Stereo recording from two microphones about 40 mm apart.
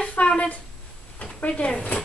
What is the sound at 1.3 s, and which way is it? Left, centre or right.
Speech, left.